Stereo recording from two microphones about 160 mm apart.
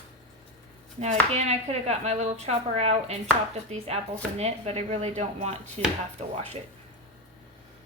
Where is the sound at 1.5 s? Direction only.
45° right (ahead or behind).